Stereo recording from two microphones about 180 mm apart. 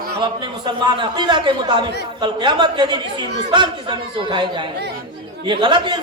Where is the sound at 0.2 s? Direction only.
25° right (ahead or behind).